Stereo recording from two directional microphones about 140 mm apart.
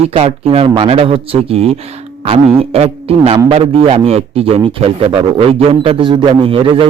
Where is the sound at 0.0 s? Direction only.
45° right (ahead or behind).